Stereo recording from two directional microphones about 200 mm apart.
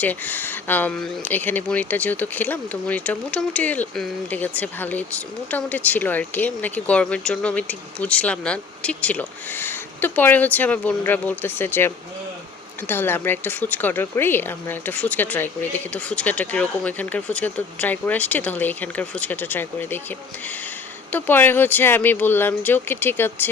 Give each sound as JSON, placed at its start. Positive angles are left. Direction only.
{"t": 0.0, "sound": "speech", "side_deg": 10}
{"t": 21.1, "sound": "speech", "side_deg": 10}